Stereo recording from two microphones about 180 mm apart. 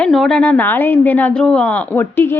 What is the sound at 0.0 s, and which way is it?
A woman's voice, centre (ahead or behind).